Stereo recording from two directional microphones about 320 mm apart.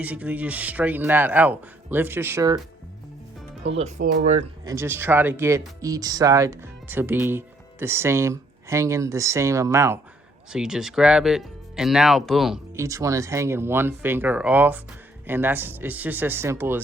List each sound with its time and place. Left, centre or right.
0.0 s speech: centre
3.8 s speech: right
4.6 s speech: centre